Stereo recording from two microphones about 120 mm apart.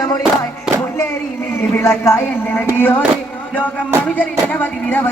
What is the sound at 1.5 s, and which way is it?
Speech, 20° left (ahead or behind).